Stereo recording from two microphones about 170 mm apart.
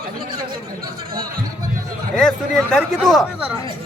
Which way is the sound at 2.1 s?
5° left (ahead or behind).